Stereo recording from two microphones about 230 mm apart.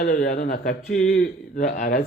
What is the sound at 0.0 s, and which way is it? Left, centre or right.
Speech, left.